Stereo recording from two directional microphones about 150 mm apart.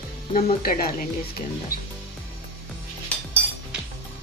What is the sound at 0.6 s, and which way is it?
Speech, 90° left.